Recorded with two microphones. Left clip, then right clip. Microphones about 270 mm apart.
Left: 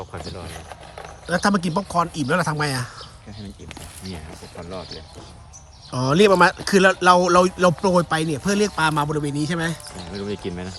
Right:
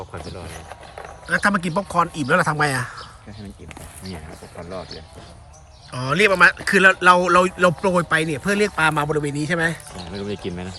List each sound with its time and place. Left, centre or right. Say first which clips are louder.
0.0 s a sound: even; centre
1.3 s speech: right 1 dB; centre
4.0 s speech: right 2 dB; centre
5.9 s speech: left 2 dB; centre
10.1 s speech: even; right